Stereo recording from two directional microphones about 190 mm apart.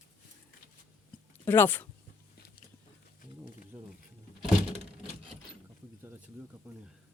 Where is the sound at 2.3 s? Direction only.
55° left (ahead or behind).